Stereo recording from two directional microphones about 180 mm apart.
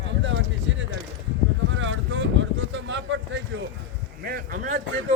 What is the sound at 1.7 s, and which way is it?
Boat, 90° right.